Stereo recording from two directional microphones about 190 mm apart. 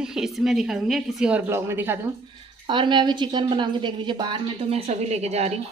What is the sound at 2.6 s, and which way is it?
A woman's voice, 25° right (ahead or behind).